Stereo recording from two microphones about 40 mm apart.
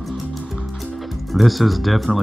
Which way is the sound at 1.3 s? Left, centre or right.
Centre.